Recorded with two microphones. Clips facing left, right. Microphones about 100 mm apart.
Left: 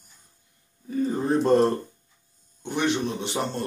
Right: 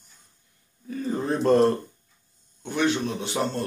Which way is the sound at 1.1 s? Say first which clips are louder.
Even; 20° left (ahead or behind).